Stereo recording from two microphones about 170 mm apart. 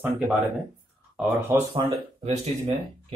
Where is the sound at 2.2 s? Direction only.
35° right (ahead or behind).